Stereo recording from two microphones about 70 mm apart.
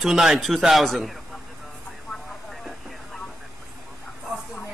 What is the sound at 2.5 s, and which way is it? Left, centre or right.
Vehicle, centre.